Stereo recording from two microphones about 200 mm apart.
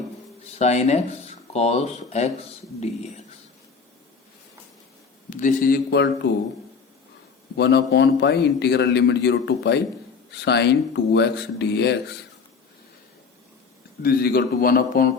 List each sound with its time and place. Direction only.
0.6 s speech: 35° left (ahead or behind)
5.3 s a man's voice: 40° left (ahead or behind); by 6.3 s 55° left (ahead or behind)
7.5 s a man's voice: 55° left (ahead or behind)
14.0 s a man's voice: 50° left (ahead or behind)